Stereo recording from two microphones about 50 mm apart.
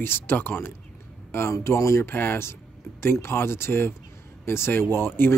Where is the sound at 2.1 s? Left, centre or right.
Left.